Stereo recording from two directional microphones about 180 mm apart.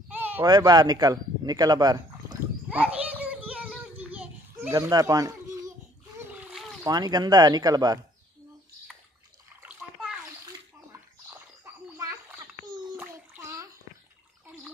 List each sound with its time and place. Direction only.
0.1 s bleat: 10° right (ahead or behind)
0.5 s speech: 20° right (ahead or behind)
2.7 s children playing: 10° right (ahead or behind)
6.1 s splash: 10° right (ahead or behind)
6.8 s speech: 20° right (ahead or behind)
9.6 s splash: 5° right (ahead or behind)
11.2 s a sound: 15° right (ahead or behind)